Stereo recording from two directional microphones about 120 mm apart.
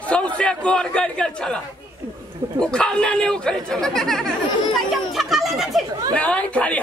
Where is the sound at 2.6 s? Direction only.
5° left (ahead or behind).